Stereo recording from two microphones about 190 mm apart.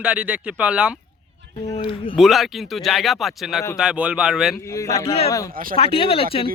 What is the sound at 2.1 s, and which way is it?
Speech, centre (ahead or behind).